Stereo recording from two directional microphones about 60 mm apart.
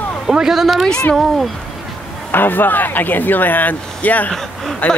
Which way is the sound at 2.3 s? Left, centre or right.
Left.